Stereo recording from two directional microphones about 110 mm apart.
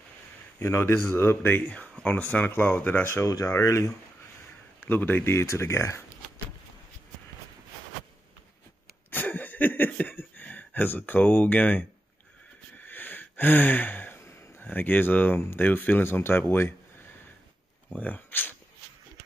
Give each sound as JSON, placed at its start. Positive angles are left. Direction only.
{"t": 0.6, "sound": "speech", "side_deg": 25}
{"t": 3.3, "sound": "speech", "side_deg": 30}
{"t": 4.8, "sound": "speech", "side_deg": 20}
{"t": 9.1, "sound": "a sound", "side_deg": 15}
{"t": 12.8, "sound": "a sound", "side_deg": 15}
{"t": 17.9, "sound": "speech", "side_deg": 15}